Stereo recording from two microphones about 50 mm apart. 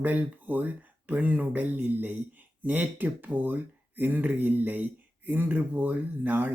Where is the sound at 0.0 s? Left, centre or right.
Right.